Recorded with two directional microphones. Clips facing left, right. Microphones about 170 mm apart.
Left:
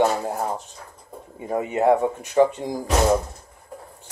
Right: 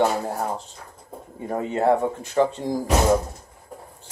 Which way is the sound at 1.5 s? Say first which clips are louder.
Left 2 dB; 15° left (ahead or behind).